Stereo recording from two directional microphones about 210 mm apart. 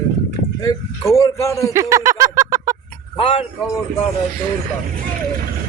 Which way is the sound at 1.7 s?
15° right (ahead or behind).